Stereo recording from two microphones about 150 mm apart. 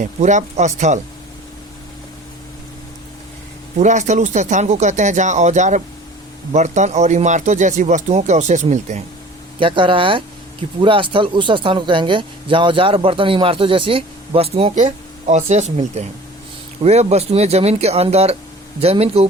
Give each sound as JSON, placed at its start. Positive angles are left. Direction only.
{"t": 0.0, "sound": "speech", "side_deg": -55}
{"t": 3.8, "sound": "speech", "side_deg": -55}
{"t": 9.6, "sound": "speech", "side_deg": -35}